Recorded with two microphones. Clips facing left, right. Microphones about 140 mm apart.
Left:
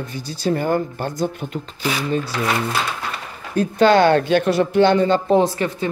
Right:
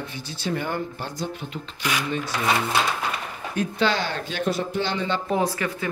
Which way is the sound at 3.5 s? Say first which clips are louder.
Left 10 dB; 45° left (ahead or behind).